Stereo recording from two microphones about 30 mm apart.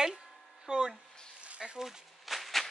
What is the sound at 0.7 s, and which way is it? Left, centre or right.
Speech, right.